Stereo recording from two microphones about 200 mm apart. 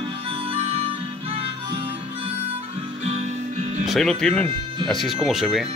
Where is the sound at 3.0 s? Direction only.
35° right (ahead or behind).